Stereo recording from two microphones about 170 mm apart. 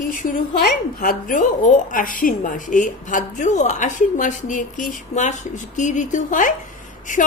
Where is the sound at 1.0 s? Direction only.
50° left (ahead or behind).